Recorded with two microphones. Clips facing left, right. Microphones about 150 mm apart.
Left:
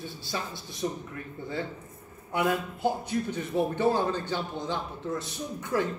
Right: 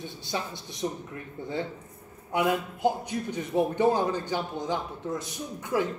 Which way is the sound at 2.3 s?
15° right (ahead or behind).